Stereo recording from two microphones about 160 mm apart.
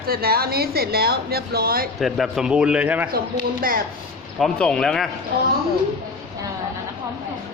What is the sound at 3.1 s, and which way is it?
Speech, 65° right (ahead or behind).